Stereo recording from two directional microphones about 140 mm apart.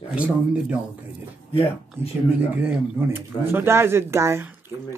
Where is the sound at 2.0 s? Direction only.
15° right (ahead or behind).